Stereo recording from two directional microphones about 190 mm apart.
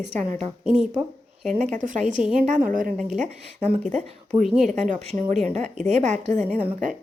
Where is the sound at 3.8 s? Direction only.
35° right (ahead or behind).